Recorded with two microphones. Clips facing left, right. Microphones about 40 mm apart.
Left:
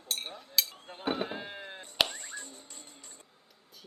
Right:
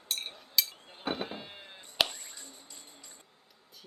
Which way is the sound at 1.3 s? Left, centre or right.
Left.